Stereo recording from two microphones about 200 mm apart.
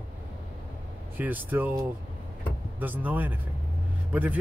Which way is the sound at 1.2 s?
10° right (ahead or behind).